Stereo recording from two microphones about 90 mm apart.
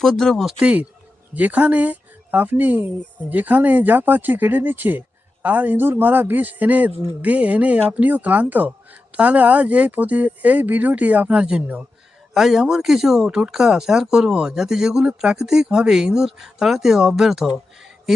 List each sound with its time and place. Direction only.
0.0 s speech: 5° left (ahead or behind)
0.6 s speech: 15° right (ahead or behind)